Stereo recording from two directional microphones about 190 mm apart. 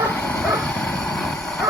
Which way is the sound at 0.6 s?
Centre (ahead or behind).